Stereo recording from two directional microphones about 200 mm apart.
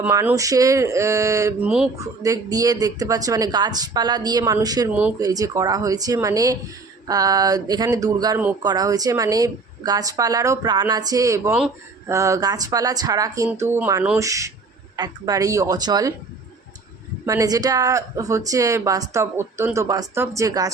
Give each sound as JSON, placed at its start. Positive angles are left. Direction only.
{"t": 0.0, "sound": "speech", "side_deg": -10}
{"t": 4.9, "sound": "speech", "side_deg": -5}
{"t": 5.2, "sound": "speech", "side_deg": -20}
{"t": 17.2, "sound": "speech", "side_deg": -20}